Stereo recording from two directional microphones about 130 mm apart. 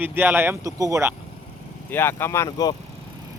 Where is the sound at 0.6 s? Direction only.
25° right (ahead or behind).